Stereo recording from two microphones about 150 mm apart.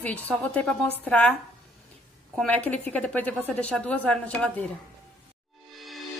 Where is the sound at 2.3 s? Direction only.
10° left (ahead or behind).